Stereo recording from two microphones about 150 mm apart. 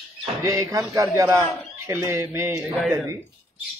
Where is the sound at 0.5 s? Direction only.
20° right (ahead or behind).